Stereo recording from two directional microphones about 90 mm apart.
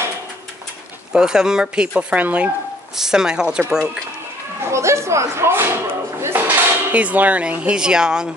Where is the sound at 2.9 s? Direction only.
5° right (ahead or behind).